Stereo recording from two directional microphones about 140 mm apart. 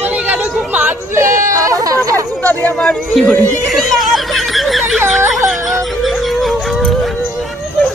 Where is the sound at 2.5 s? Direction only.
10° left (ahead or behind).